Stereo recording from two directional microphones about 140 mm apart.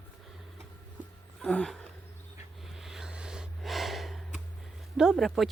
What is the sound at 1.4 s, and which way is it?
Roaring cats, 5° left (ahead or behind).